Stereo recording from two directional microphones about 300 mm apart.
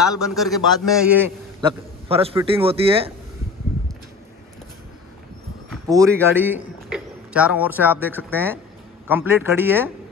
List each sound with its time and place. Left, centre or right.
0.0 s a man's voice: centre
1.6 s a man's voice: centre
5.9 s speech: centre